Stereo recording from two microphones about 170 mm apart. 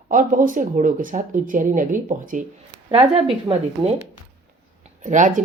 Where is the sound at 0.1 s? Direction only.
50° right (ahead or behind).